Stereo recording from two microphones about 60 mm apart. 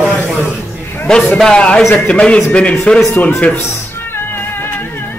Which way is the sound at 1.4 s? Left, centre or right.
Centre.